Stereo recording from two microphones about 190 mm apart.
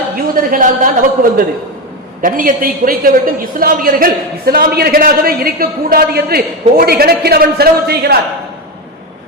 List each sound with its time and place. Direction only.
0.3 s a man's voice: 45° right (ahead or behind)